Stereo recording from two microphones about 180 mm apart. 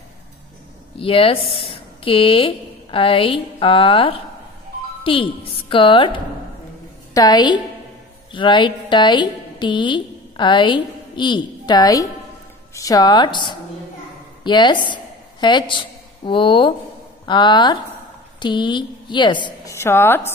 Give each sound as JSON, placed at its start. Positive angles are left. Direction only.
{"t": 0.9, "sound": "a woman's voice", "side_deg": 30}